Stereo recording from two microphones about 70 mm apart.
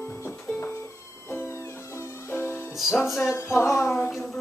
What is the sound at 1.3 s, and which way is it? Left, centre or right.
Music, left.